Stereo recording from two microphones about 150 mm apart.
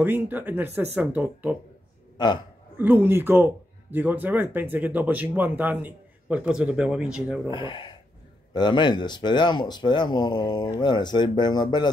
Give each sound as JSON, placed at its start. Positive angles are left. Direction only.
{"t": 0.0, "sound": "speech", "side_deg": -10}
{"t": 2.1, "sound": "speech", "side_deg": 30}
{"t": 2.8, "sound": "speech", "side_deg": -10}
{"t": 7.4, "sound": "speech", "side_deg": 30}